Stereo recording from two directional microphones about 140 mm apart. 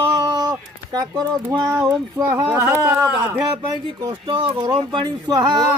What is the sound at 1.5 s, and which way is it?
Speech, 25° right (ahead or behind).